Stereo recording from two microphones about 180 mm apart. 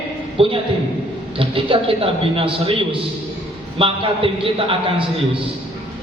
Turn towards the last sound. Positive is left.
turn(degrees=-30)  # may be behind; listen again after turning